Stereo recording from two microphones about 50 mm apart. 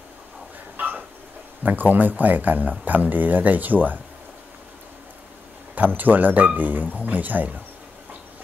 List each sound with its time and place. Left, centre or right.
0.7 s dog: right
1.6 s speech: right
5.8 s speech: right